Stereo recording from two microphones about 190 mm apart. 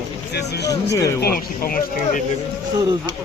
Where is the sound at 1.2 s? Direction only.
50° left (ahead or behind).